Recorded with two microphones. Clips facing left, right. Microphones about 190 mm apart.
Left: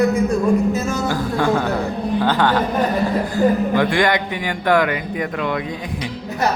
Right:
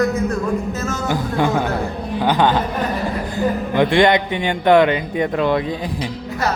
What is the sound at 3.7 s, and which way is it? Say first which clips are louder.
Speech: right 3 dB; 20° right (ahead or behind).